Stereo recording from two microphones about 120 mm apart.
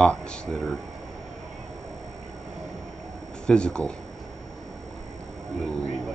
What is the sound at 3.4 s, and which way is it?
Speech, 10° left (ahead or behind).